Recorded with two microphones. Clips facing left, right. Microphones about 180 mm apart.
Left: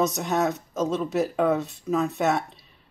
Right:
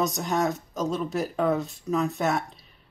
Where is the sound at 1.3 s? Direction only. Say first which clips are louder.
Left 1 dB; 5° left (ahead or behind).